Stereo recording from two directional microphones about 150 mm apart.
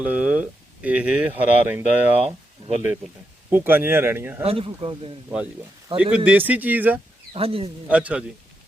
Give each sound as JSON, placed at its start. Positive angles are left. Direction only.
{"t": 0.0, "sound": "speech", "side_deg": -10}
{"t": 2.6, "sound": "speech", "side_deg": -45}
{"t": 3.5, "sound": "speech", "side_deg": -15}
{"t": 4.4, "sound": "speech", "side_deg": -40}
{"t": 6.0, "sound": "speech", "side_deg": -10}
{"t": 7.3, "sound": "speech", "side_deg": -40}
{"t": 7.9, "sound": "speech", "side_deg": -10}